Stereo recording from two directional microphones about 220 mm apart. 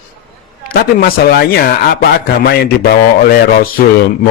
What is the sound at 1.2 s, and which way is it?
A man's voice, 45° left (ahead or behind).